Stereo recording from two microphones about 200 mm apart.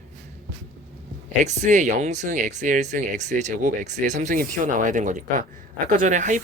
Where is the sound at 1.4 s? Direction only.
35° right (ahead or behind).